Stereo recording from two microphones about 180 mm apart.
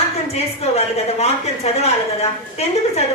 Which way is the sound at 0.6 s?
35° left (ahead or behind).